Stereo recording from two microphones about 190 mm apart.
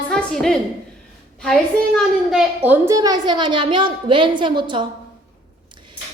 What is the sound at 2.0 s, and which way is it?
A woman's voice, 5° right (ahead or behind).